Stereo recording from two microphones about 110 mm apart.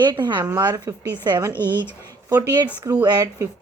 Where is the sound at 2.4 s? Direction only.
35° right (ahead or behind).